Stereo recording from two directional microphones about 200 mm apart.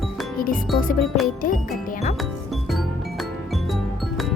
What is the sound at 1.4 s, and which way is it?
Speech, 45° left (ahead or behind).